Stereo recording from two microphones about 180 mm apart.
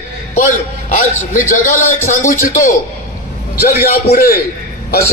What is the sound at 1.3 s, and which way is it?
A man's voice, 45° left (ahead or behind).